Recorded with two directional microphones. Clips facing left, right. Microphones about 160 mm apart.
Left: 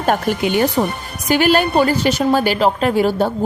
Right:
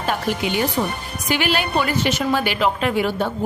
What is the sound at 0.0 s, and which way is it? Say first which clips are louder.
A woman's voice: left 5 dB; 50° left (ahead or behind).